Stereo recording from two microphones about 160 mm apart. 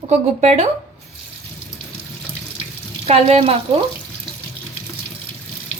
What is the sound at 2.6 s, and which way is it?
Water tap, 40° right (ahead or behind).